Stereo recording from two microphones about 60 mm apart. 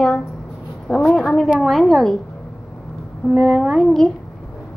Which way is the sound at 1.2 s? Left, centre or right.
Centre.